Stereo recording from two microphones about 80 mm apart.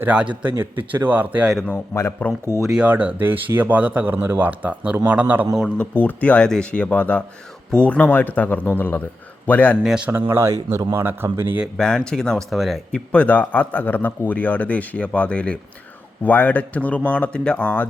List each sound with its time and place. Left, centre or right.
0.0 s a man's voice: centre
1.6 s a man's voice: left
2.6 s speech: centre
2.8 s speech: right
6.0 s a man's voice: centre
9.8 s a man's voice: centre
10.1 s speech: right
11.8 s speech: centre
12.9 s a man's voice: centre